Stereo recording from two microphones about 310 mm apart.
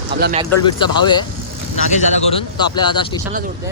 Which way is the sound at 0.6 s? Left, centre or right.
Centre.